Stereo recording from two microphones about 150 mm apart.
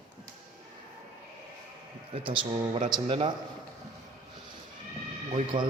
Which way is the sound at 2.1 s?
35° right (ahead or behind).